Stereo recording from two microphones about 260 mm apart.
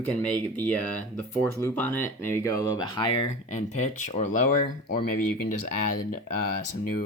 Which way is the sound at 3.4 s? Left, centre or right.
Left.